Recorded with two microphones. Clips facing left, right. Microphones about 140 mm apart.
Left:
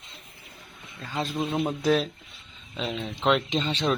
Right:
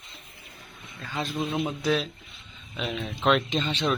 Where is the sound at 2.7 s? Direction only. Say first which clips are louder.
Even; 25° left (ahead or behind).